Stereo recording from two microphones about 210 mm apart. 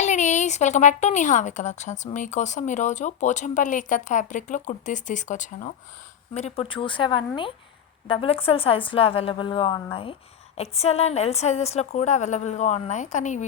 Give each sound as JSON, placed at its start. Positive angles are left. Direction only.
{"t": 0.0, "sound": "a woman's voice", "side_deg": 35}